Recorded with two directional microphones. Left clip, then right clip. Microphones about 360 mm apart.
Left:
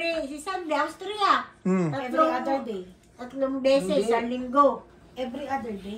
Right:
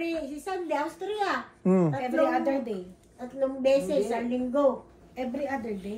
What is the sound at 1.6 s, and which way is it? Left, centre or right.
Speech, centre.